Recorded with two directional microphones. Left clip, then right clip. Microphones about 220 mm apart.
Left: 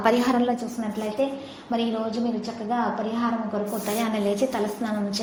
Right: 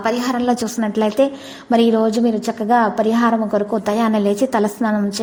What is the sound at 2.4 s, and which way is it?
A woman's voice, 50° right (ahead or behind).